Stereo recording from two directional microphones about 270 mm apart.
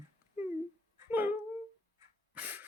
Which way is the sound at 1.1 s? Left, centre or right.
Centre.